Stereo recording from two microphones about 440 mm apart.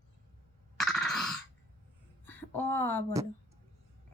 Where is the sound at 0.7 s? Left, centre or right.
Centre.